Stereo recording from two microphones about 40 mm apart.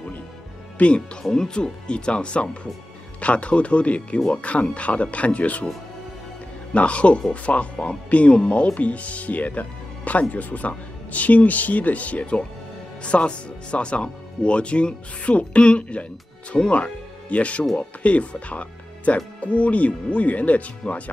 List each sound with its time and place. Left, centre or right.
0.7 s speech: left
1.3 s speech: centre; by 5.7 s left
6.7 s speech: left